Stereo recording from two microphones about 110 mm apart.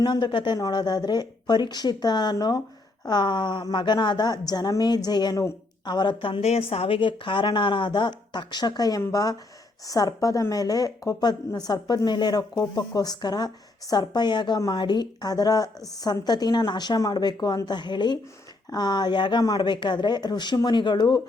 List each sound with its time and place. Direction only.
0.0 s a woman's voice: 45° left (ahead or behind)
6.4 s a woman's voice: 70° left (ahead or behind); by 21.2 s 40° left (ahead or behind)